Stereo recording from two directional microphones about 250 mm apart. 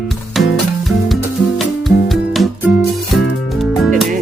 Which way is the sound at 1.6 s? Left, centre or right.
Centre.